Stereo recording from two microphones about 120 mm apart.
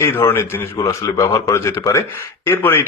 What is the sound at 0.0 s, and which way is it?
Speech, 20° left (ahead or behind).